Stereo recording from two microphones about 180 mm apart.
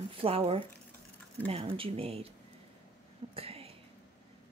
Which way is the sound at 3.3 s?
35° right (ahead or behind).